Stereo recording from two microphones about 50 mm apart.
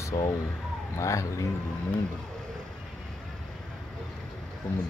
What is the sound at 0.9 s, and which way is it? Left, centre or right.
Speech, left.